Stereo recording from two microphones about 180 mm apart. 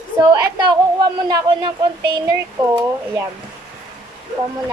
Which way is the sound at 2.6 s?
20° right (ahead or behind).